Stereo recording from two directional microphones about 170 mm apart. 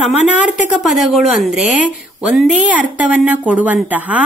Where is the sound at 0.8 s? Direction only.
Centre (ahead or behind).